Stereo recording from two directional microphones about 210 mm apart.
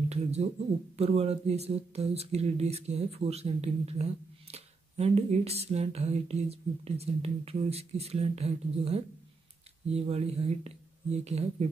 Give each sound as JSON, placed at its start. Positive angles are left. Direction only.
{"t": 0.1, "sound": "speech", "side_deg": -30}